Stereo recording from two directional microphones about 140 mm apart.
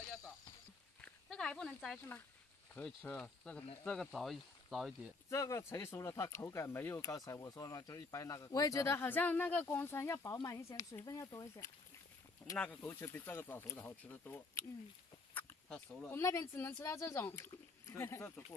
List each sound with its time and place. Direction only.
1.0 s a sound: 5° left (ahead or behind)
2.7 s speech: 10° left (ahead or behind)
5.3 s speech: 20° left (ahead or behind)
12.5 s speech: 15° left (ahead or behind)
15.3 s a sound: 10° left (ahead or behind)
16.2 s speech: 20° left (ahead or behind)